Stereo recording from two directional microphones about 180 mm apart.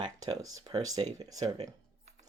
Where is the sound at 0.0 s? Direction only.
20° right (ahead or behind).